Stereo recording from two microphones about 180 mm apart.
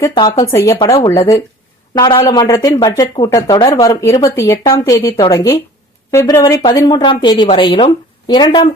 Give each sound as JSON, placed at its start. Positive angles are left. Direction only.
{"t": 0.1, "sound": "speech", "side_deg": 25}